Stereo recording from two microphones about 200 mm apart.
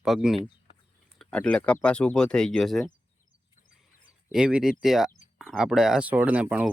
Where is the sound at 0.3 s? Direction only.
25° left (ahead or behind).